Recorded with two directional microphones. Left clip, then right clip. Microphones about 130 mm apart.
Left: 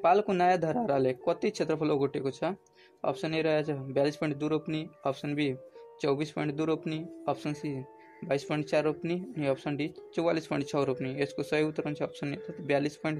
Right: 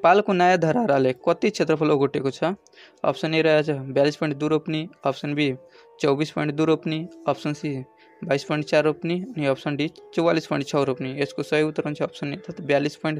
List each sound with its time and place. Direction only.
0.0 s speech: 40° right (ahead or behind)